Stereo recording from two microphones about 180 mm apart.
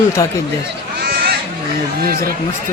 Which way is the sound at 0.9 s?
55° right (ahead or behind).